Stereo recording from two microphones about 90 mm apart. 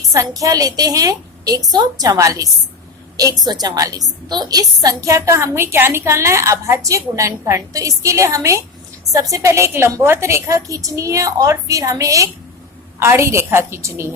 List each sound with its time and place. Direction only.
0.1 s a woman's voice: 40° right (ahead or behind)